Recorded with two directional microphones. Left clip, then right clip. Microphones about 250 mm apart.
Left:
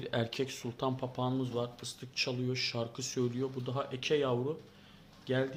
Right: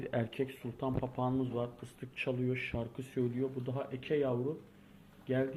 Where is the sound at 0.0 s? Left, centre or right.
Centre.